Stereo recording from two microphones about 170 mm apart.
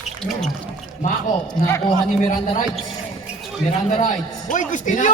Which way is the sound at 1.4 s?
20° left (ahead or behind).